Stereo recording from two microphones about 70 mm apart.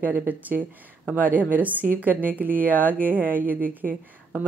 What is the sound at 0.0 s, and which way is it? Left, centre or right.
Speech, right.